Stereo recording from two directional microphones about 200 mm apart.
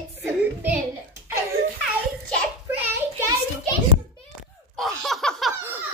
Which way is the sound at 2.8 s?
10° right (ahead or behind).